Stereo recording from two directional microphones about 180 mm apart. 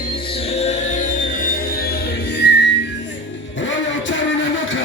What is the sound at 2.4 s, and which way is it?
Whistling, 70° left (ahead or behind).